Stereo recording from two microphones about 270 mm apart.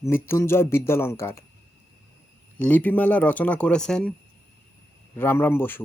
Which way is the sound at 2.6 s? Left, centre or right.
Centre.